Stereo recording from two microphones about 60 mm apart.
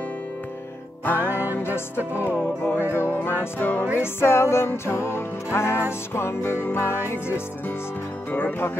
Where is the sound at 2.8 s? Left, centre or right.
Right.